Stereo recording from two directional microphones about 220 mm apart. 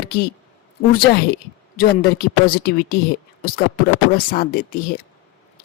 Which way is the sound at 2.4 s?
45° left (ahead or behind).